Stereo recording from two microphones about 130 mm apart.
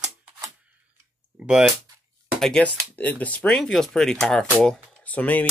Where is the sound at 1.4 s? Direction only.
5° right (ahead or behind).